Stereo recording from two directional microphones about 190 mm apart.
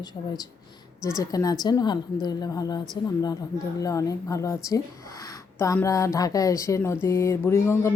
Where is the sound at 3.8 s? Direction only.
15° left (ahead or behind).